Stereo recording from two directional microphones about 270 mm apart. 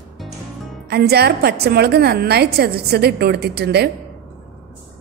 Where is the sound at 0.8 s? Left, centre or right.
Right.